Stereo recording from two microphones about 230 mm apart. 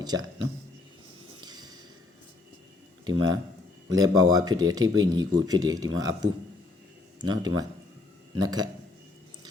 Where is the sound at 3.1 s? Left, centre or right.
Right.